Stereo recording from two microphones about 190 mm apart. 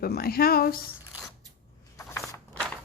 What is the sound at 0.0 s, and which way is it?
Speech, 55° left (ahead or behind).